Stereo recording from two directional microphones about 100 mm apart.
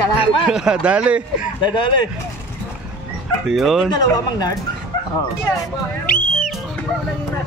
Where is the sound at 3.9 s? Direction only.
40° left (ahead or behind).